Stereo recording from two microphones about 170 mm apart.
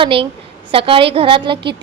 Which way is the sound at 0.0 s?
30° right (ahead or behind).